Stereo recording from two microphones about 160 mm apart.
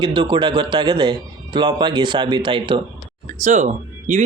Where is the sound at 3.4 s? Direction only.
45° right (ahead or behind).